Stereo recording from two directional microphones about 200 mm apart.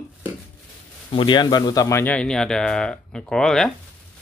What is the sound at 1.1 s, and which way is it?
Speech, 20° left (ahead or behind).